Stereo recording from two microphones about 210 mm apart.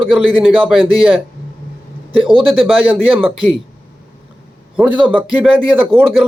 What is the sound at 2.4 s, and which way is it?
Speech, 5° right (ahead or behind).